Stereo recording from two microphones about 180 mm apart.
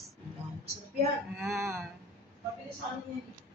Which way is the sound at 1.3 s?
Centre (ahead or behind).